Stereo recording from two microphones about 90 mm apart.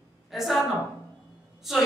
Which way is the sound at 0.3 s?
Centre (ahead or behind).